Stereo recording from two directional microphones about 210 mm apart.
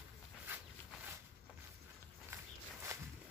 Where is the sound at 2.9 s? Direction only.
15° right (ahead or behind).